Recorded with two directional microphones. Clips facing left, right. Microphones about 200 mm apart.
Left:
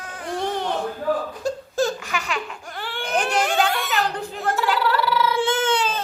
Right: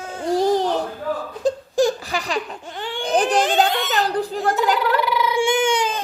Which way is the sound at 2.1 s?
35° right (ahead or behind).